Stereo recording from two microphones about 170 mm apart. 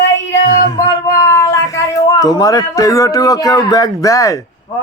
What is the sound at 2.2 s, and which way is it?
Speech, 20° left (ahead or behind).